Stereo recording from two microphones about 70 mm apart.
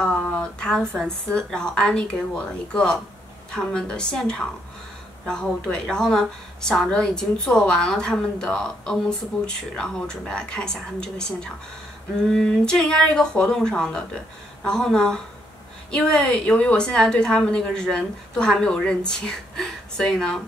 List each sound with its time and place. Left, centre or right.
0.4 s a woman's voice: centre